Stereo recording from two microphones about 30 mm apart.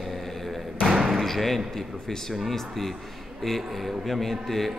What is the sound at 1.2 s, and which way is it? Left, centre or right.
A man's voice, centre.